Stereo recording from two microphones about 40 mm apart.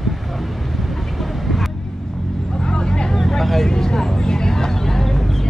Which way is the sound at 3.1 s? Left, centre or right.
Centre.